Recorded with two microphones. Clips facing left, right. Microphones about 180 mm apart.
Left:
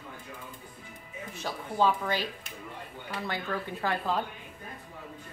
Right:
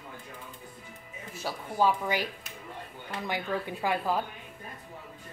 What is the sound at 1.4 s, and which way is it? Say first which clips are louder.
A woman's voice: even; 10° right (ahead or behind).